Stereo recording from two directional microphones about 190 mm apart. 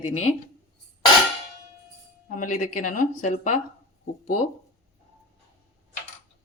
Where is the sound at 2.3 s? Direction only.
45° left (ahead or behind).